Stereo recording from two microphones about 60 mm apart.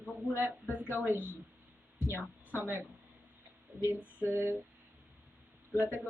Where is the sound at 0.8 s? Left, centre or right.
Right.